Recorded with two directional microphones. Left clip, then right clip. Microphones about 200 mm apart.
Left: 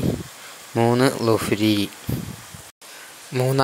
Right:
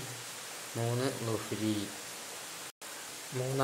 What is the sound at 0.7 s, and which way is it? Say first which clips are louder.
Speech: left 16 dB; 40° left (ahead or behind).